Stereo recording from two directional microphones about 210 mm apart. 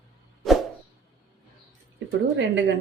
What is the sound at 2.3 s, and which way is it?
Speech, 60° right (ahead or behind).